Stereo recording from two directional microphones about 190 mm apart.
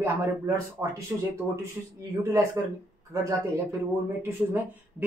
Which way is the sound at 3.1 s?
15° right (ahead or behind).